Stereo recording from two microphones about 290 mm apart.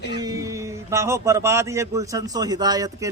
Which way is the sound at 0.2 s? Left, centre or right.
Centre.